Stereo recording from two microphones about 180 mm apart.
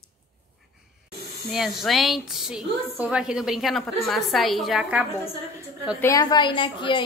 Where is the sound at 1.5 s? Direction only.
Centre (ahead or behind).